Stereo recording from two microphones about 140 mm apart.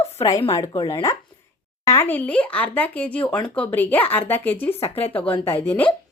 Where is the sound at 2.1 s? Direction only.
10° left (ahead or behind).